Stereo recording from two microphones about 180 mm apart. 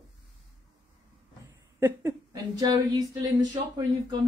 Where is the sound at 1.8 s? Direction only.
20° right (ahead or behind).